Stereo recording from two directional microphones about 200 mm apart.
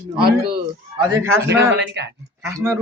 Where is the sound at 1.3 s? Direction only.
60° right (ahead or behind).